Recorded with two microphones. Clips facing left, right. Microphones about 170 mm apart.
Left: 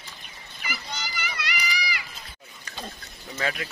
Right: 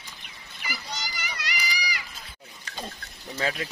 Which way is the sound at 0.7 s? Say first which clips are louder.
Left 1 dB; 40° right (ahead or behind).